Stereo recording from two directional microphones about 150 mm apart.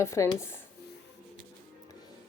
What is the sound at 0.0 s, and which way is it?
Speech, 20° left (ahead or behind).